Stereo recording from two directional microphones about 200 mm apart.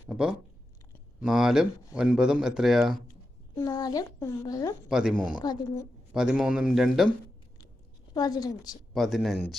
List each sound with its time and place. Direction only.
0.1 s speech: 5° right (ahead or behind)
3.5 s speech: 20° left (ahead or behind)
4.9 s speech: 5° right (ahead or behind)
5.4 s a woman's voice: 20° left (ahead or behind)
6.1 s speech: 5° right (ahead or behind)
8.1 s a woman's voice: 20° left (ahead or behind)
8.9 s speech: centre (ahead or behind)